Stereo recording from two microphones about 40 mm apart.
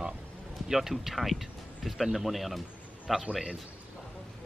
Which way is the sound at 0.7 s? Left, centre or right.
Centre.